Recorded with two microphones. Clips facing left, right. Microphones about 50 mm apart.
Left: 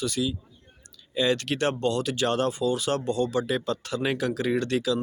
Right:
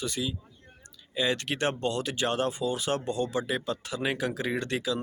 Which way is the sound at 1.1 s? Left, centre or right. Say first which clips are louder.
Left 4 dB; centre.